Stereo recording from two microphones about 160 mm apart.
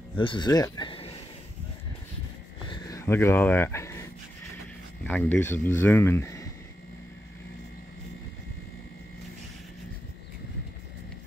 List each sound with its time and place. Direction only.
0.2 s speech: 30° left (ahead or behind)
2.7 s a sound: 20° left (ahead or behind)
5.0 s speech: 10° left (ahead or behind)